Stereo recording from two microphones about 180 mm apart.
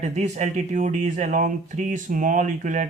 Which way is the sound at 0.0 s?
40° right (ahead or behind).